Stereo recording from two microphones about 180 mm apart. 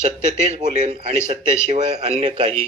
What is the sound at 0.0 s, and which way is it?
Speech, 40° right (ahead or behind).